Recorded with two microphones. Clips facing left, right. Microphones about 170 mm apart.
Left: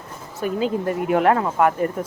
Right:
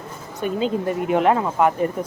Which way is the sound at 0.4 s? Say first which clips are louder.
Even; 25° right (ahead or behind).